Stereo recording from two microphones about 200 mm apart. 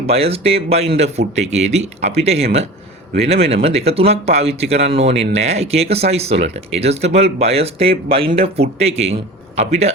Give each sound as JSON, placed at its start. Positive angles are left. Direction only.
{"t": 0.1, "sound": "speech", "side_deg": -30}